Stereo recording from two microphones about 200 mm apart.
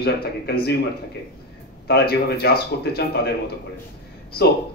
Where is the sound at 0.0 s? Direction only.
50° left (ahead or behind).